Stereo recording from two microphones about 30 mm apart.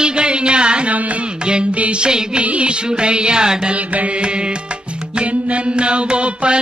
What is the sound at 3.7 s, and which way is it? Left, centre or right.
Music, right.